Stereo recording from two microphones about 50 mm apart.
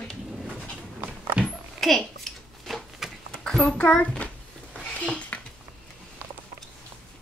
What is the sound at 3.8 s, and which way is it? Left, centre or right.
Speech, left.